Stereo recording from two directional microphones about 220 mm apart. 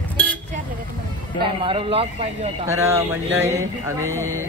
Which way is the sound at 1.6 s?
25° right (ahead or behind).